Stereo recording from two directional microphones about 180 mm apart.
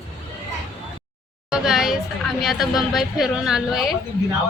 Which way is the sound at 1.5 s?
5° right (ahead or behind).